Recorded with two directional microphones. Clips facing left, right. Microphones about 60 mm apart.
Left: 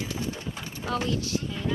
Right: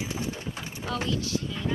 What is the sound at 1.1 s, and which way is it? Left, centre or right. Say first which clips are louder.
Speech: even; left.